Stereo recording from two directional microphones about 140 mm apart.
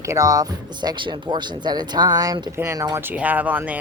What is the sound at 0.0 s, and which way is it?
Speech, 20° right (ahead or behind).